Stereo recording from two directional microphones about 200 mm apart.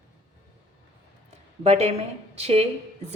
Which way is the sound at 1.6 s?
30° right (ahead or behind).